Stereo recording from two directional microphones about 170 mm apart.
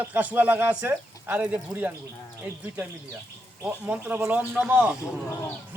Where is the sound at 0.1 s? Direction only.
10° right (ahead or behind).